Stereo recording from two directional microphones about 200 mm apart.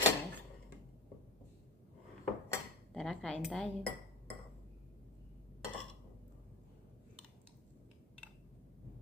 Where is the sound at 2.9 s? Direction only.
Centre (ahead or behind).